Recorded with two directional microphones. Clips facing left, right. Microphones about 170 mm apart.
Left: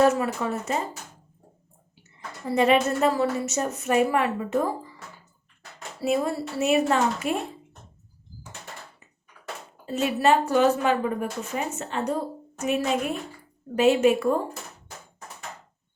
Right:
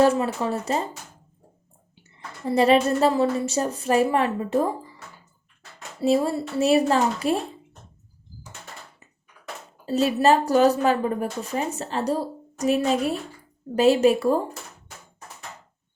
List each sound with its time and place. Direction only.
0.0 s a woman's voice: 30° right (ahead or behind)
2.6 s a woman's voice: 35° right (ahead or behind)
6.0 s a woman's voice: 25° right (ahead or behind)
9.8 s a woman's voice: 35° right (ahead or behind)